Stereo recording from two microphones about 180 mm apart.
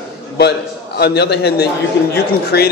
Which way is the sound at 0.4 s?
65° left (ahead or behind).